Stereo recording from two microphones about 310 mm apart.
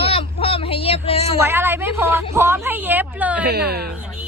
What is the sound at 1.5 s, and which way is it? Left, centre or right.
A woman's voice, centre.